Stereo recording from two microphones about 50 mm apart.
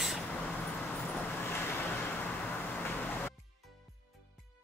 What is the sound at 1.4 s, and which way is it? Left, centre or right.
Vehicle, left.